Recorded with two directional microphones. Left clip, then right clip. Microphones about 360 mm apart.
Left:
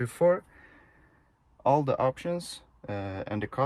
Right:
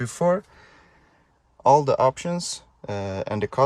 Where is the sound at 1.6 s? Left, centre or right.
Centre.